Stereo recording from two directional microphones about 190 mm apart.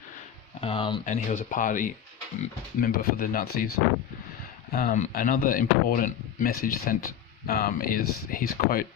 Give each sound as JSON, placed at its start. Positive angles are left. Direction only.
{"t": 0.6, "sound": "speech", "side_deg": 25}
{"t": 1.0, "sound": "speech", "side_deg": 40}
{"t": 4.7, "sound": "speech", "side_deg": 50}